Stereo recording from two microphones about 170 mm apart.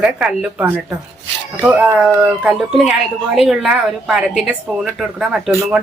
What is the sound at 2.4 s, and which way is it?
Speech, 5° right (ahead or behind).